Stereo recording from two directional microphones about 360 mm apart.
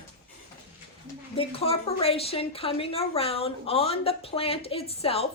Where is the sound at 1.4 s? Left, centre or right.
Centre.